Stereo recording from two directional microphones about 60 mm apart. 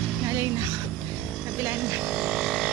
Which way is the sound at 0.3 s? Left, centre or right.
Right.